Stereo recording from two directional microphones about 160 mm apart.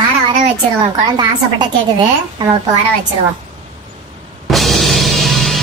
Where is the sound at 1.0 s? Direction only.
25° right (ahead or behind).